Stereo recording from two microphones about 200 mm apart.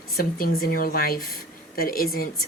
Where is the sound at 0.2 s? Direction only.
50° left (ahead or behind).